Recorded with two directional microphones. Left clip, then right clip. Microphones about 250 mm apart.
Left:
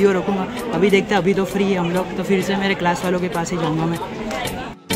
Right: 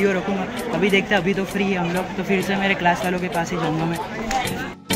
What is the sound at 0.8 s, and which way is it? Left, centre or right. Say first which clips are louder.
Speech: left 3 dB; centre.